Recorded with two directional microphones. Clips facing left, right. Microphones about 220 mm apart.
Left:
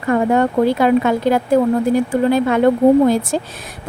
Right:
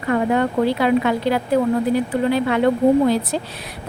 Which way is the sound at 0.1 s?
45° left (ahead or behind).